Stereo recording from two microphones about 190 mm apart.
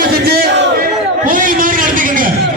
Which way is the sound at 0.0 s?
55° right (ahead or behind).